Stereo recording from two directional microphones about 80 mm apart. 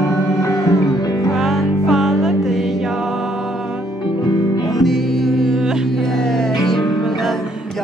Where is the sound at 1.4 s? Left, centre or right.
Centre.